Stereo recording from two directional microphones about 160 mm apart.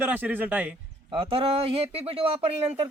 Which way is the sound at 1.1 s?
35° right (ahead or behind).